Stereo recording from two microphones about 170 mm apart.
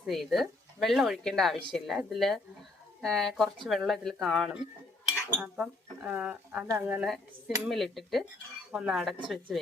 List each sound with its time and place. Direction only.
0.0 s speech: centre (ahead or behind)